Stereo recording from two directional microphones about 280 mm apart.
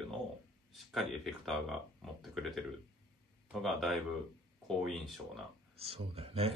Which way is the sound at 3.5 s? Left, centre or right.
Centre.